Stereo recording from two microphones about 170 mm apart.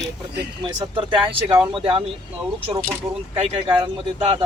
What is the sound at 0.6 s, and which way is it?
Speech, 30° right (ahead or behind).